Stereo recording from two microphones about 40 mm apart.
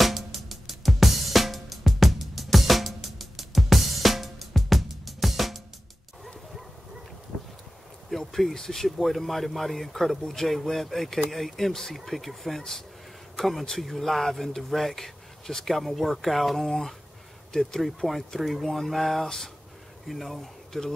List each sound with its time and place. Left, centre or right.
0.0 s music: centre
8.1 s speech: centre
17.5 s speech: centre
17.8 s speech: centre
20.1 s speech: centre